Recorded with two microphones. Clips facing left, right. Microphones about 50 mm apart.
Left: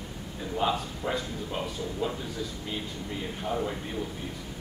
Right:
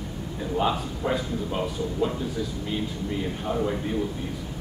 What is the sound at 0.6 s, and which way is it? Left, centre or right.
A man's voice, centre.